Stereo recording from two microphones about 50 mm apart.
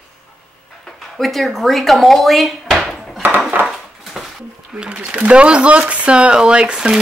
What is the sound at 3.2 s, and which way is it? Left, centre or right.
Dishes, right.